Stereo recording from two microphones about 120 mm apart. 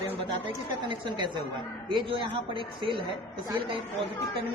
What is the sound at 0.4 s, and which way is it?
A woman's voice, 40° right (ahead or behind).